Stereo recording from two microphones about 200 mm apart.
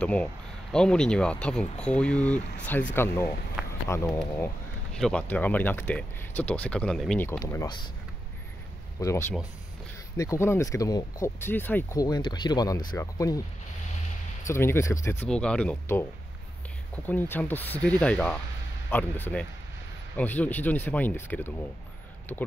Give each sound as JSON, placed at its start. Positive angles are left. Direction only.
{"t": 0.0, "sound": "speech", "side_deg": 5}
{"t": 3.6, "sound": "a sound", "side_deg": -5}
{"t": 3.9, "sound": "speech", "side_deg": 10}
{"t": 7.2, "sound": "speech", "side_deg": 15}
{"t": 9.0, "sound": "speech", "side_deg": 15}
{"t": 14.5, "sound": "speech", "side_deg": 10}